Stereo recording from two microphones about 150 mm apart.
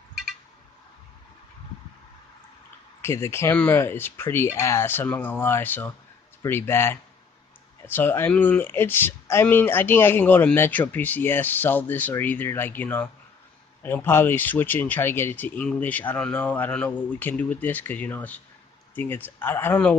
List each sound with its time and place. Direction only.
3.0 s speech: 15° left (ahead or behind)